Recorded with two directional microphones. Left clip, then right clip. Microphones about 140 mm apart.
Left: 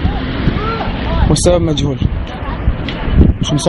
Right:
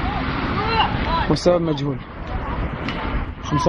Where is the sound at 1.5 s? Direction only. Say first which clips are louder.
Left 5 dB; 25° left (ahead or behind).